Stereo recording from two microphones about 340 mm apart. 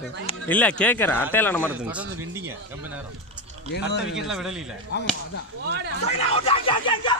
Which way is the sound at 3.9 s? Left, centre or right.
Left.